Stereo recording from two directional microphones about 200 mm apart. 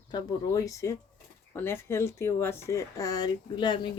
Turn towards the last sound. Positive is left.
turn(degrees=25)  # may be behind; listen again after turning